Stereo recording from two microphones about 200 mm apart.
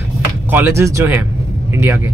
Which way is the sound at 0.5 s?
10° right (ahead or behind).